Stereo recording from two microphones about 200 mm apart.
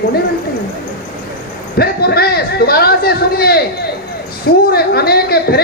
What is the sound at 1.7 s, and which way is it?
Speech, 50° left (ahead or behind).